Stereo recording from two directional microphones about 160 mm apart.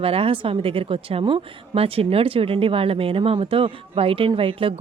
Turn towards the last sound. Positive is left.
turn(degrees=-35)  # may be behind; listen again after turning